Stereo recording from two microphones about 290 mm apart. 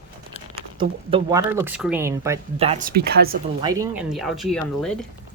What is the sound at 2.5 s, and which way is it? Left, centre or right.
Speech, right.